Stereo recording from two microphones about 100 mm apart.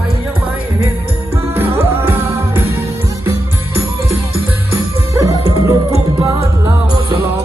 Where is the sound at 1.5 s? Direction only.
20° right (ahead or behind).